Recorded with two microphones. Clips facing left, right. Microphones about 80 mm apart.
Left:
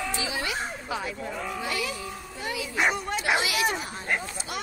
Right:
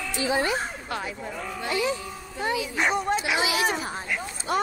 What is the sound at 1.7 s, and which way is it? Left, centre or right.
Speech, right.